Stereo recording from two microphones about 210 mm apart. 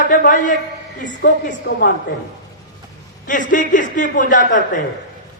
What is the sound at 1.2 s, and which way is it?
Speech, 55° left (ahead or behind).